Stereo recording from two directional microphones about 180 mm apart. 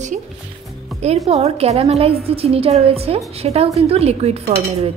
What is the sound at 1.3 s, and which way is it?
A woman's voice, 35° right (ahead or behind).